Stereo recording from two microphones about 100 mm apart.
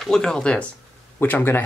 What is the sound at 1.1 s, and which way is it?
Speech, 20° left (ahead or behind).